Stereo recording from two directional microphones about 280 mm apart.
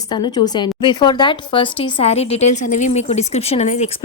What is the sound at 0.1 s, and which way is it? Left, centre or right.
A woman's voice, centre.